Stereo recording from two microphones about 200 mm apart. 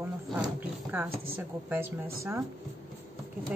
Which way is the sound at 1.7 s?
10° right (ahead or behind).